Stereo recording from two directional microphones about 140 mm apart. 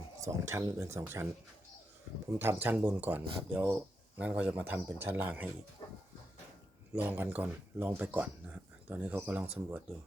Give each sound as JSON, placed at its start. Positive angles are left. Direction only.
{"t": 0.3, "sound": "speech", "side_deg": -20}
{"t": 6.9, "sound": "speech", "side_deg": -15}